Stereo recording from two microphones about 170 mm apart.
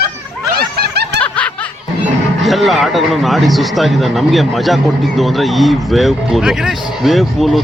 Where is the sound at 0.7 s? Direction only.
70° right (ahead or behind).